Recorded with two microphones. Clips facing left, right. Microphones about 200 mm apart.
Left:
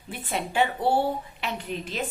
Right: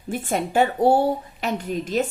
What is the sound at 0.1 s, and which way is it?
A woman's voice, 45° right (ahead or behind).